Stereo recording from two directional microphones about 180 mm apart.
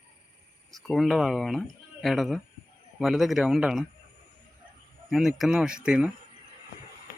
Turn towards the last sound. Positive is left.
turn(degrees=-5)  # may be behind; listen again after turning